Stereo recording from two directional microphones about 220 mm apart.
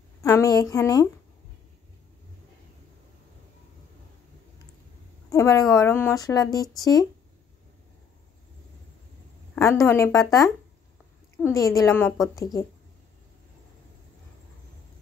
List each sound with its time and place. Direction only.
0.2 s a woman's voice: 15° left (ahead or behind)
5.3 s speech: 15° left (ahead or behind)
9.6 s speech: 15° left (ahead or behind)
11.4 s speech: 15° left (ahead or behind)